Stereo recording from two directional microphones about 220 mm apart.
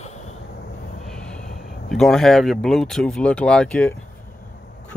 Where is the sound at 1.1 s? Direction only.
5° left (ahead or behind).